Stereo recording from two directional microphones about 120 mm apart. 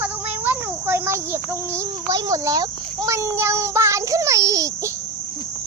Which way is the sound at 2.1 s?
30° right (ahead or behind).